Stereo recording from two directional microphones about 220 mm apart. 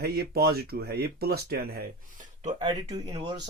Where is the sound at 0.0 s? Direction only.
45° right (ahead or behind).